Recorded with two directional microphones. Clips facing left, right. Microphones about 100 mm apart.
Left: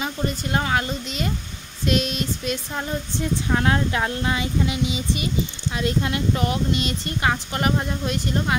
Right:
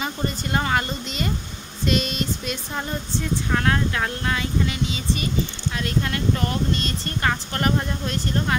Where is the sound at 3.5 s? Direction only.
20° left (ahead or behind).